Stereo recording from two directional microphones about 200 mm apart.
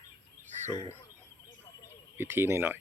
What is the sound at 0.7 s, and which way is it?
Speech, 20° left (ahead or behind).